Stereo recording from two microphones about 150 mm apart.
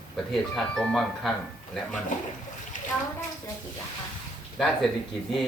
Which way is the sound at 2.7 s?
60° left (ahead or behind).